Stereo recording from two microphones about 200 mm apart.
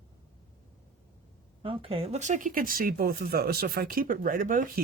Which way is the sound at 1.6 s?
30° right (ahead or behind).